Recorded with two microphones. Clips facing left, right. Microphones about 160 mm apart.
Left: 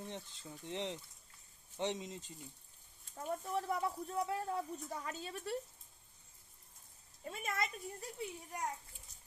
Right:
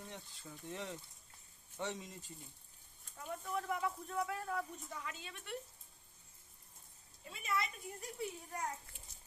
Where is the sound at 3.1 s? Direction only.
35° left (ahead or behind).